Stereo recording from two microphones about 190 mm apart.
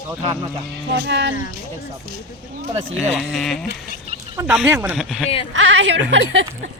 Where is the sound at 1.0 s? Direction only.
65° right (ahead or behind).